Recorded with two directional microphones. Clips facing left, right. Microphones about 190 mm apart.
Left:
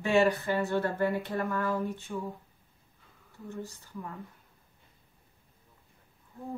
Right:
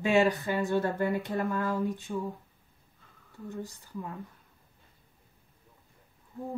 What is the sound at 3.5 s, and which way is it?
Speech, 15° right (ahead or behind).